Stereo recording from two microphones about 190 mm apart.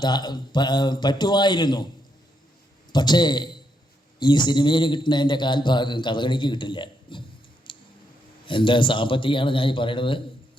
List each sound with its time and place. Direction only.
0.0 s a man's voice: 20° left (ahead or behind)
2.9 s a man's voice: 25° left (ahead or behind)
7.7 s a sound: 25° left (ahead or behind)
8.4 s a man's voice: 25° left (ahead or behind)